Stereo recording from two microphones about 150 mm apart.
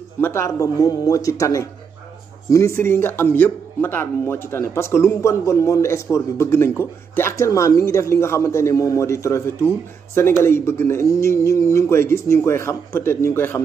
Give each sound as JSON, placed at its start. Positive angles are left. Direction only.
{"t": 0.2, "sound": "a man's voice", "side_deg": 20}